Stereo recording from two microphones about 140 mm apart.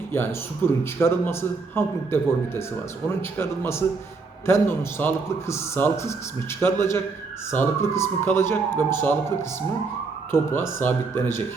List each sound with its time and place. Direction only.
0.1 s a man's voice: 15° left (ahead or behind)